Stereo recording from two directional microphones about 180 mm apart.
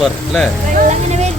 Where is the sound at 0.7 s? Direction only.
40° right (ahead or behind).